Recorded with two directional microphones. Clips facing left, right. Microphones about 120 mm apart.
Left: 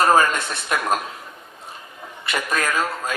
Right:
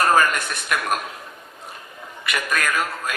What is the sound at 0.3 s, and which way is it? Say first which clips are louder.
Speech: left 1 dB; 25° left (ahead or behind).